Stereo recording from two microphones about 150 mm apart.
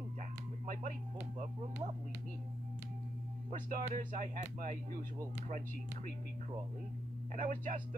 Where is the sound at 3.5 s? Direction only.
65° right (ahead or behind).